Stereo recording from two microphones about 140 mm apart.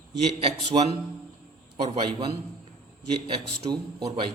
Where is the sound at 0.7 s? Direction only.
50° right (ahead or behind).